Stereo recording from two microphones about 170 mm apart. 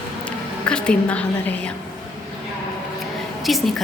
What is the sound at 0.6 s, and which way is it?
A woman's voice, 5° left (ahead or behind).